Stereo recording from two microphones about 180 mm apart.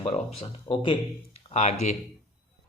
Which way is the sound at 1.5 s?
40° left (ahead or behind).